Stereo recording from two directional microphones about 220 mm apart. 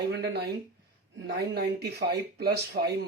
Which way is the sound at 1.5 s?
50° right (ahead or behind).